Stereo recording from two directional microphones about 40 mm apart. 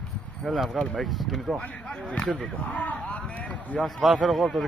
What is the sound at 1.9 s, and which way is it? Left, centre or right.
Speech, left.